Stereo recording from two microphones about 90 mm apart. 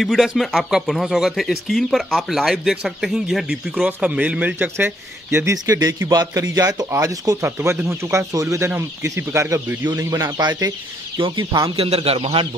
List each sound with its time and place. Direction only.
0.0 s speech: centre (ahead or behind); by 5.5 s 25° right (ahead or behind)
5.5 s speech: 40° right (ahead or behind)
10.4 s speech: 50° right (ahead or behind)
11.1 s speech: 70° right (ahead or behind); by 12.4 s 90° right